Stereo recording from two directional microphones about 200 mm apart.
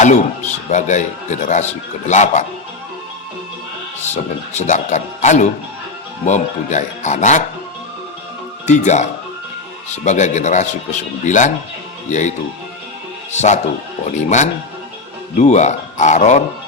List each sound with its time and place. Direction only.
0.0 s speech: 35° left (ahead or behind)
4.1 s speech: 35° left (ahead or behind)
8.6 s speech: 35° left (ahead or behind)
14.0 s speech: 35° left (ahead or behind)